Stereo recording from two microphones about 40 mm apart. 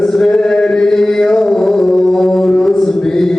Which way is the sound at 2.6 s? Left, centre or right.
Centre.